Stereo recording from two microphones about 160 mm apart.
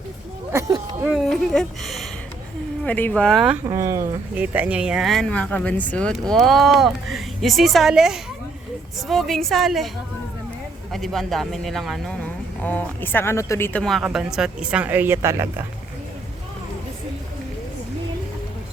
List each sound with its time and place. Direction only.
0.5 s speech: 15° right (ahead or behind)
1.1 s speech: 5° left (ahead or behind)
3.7 s speech: 20° right (ahead or behind); by 9.9 s centre (ahead or behind)
10.9 s speech: centre (ahead or behind)
12.6 s speech: 10° left (ahead or behind)
13.7 s speech: centre (ahead or behind); by 15.6 s 15° right (ahead or behind)